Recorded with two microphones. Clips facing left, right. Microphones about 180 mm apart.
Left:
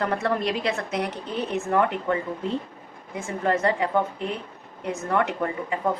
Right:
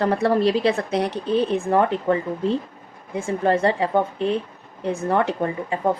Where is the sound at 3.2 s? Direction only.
30° right (ahead or behind).